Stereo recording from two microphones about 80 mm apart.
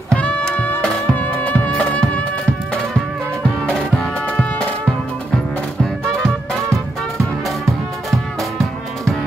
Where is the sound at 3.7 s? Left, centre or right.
Centre.